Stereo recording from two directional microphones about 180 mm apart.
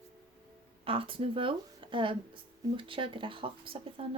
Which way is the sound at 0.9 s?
30° right (ahead or behind).